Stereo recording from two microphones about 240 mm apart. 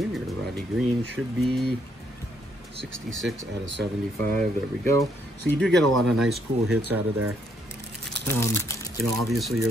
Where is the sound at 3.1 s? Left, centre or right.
Centre.